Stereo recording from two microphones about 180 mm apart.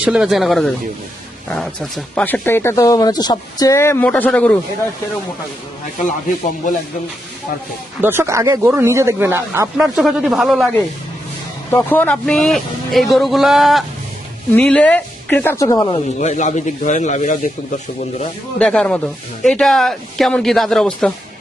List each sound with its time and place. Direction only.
0.0 s speech: 5° right (ahead or behind)
8.0 s speech: 15° right (ahead or behind)
9.7 s speech: 5° right (ahead or behind)
11.7 s speech: 10° left (ahead or behind)
16.2 s speech: 40° left (ahead or behind)
18.6 s speech: 5° left (ahead or behind)